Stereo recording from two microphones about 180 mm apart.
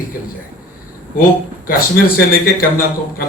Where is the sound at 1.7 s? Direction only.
55° left (ahead or behind).